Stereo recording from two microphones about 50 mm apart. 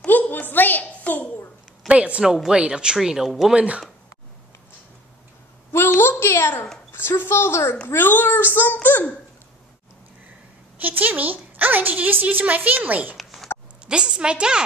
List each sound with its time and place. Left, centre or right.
0.0 s a sound: left
1.9 s a woman's voice: right; by 3.5 s centre
3.5 s speech: right
5.7 s a sound: left
6.9 s a woman's voice: left
7.9 s a child's voice: left
10.8 s a woman's voice: right
13.2 s a sound: centre
13.8 s a woman's voice: centre